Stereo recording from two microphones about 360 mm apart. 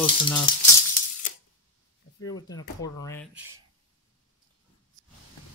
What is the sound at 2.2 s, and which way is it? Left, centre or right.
Speech, centre.